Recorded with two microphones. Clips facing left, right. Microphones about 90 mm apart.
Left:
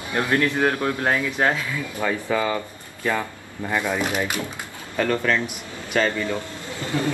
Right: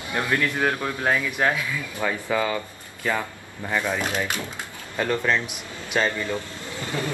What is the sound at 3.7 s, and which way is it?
Speech, 15° left (ahead or behind).